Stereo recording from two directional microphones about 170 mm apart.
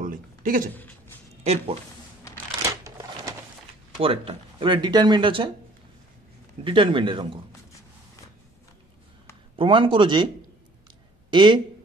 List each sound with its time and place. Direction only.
0.0 s a sound: 55° right (ahead or behind)
1.4 s speech: 40° right (ahead or behind)
2.8 s a sound: 20° right (ahead or behind)
4.0 s speech: 35° right (ahead or behind)
6.6 s speech: 30° right (ahead or behind)
9.6 s speech: 30° right (ahead or behind)